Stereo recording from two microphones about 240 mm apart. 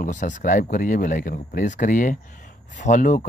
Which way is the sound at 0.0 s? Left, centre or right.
Left.